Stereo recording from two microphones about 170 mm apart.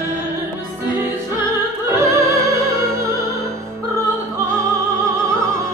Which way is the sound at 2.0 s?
15° right (ahead or behind).